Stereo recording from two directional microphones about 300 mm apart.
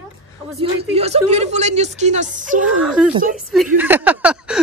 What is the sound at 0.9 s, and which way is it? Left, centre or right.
A woman's voice, right.